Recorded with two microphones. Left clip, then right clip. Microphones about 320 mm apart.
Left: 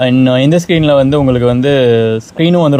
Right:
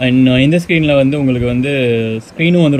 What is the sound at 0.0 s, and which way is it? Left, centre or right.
Speech, left.